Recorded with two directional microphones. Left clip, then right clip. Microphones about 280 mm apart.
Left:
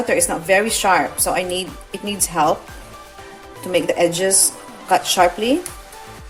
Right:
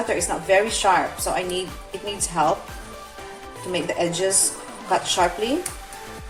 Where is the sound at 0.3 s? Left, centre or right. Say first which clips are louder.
Left 3 dB; left.